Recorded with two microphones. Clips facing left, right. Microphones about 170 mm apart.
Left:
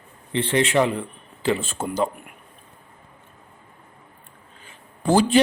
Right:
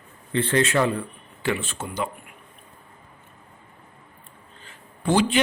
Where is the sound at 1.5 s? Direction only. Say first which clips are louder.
Left 3 dB; 30° left (ahead or behind).